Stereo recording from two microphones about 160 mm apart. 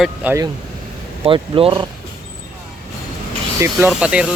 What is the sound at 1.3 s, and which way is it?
Speech, 35° right (ahead or behind).